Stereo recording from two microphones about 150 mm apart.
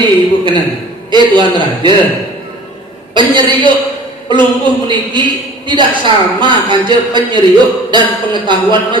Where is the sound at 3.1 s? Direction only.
30° right (ahead or behind).